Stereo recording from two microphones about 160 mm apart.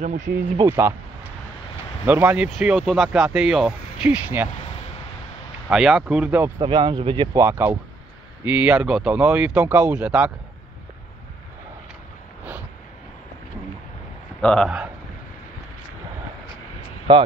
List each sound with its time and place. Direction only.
0.0 s speech: 50° right (ahead or behind)
0.7 s speech: 15° right (ahead or behind)
5.7 s speech: 5° right (ahead or behind)
6.6 s speech: 30° right (ahead or behind)
7.3 s speech: 15° right (ahead or behind)
14.4 s speech: 5° left (ahead or behind)
17.1 s speech: 30° right (ahead or behind)